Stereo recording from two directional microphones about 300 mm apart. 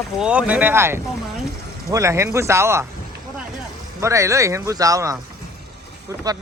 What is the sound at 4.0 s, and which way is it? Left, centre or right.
Speech, centre.